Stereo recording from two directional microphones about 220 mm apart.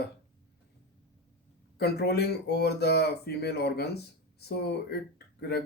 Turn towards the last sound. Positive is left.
turn(degrees=50)  # may be behind; listen again after turning